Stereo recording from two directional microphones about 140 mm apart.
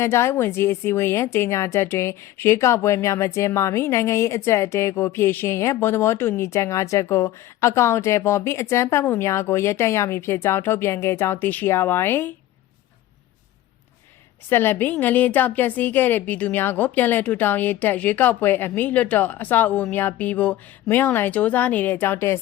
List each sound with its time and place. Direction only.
0.0 s a woman's voice: 20° left (ahead or behind)
14.5 s a woman's voice: 15° left (ahead or behind)